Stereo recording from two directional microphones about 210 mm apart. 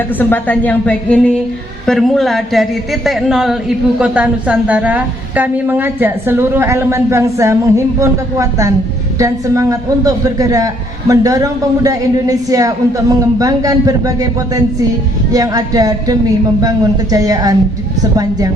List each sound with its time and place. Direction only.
0.2 s a woman's voice: 10° left (ahead or behind); by 18.5 s 15° right (ahead or behind)